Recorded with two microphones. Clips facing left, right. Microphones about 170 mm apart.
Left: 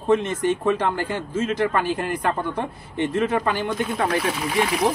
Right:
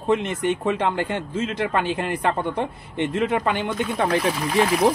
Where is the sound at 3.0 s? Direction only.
20° right (ahead or behind).